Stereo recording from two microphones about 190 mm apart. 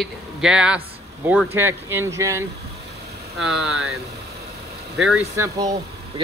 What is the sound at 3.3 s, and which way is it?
Speech, centre (ahead or behind).